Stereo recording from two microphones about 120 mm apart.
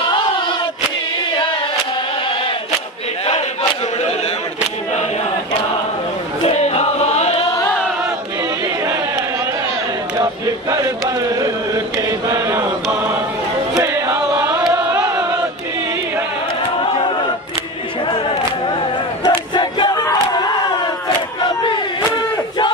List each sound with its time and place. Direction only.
6.4 s chant: 65° left (ahead or behind)
11.3 s a sound: 30° right (ahead or behind)
12.3 s chant: 20° right (ahead or behind)
13.9 s chant: 15° right (ahead or behind)
19.2 s battle cry: 40° left (ahead or behind)